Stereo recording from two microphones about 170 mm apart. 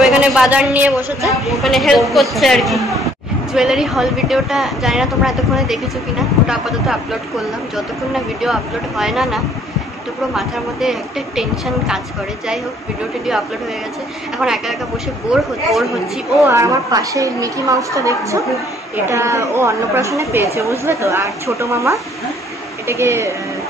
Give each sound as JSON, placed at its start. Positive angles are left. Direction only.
{"t": 0.0, "sound": "a woman's voice", "side_deg": -5}
{"t": 14.4, "sound": "a woman's voice", "side_deg": 0}
{"t": 16.4, "sound": "a woman's voice", "side_deg": -15}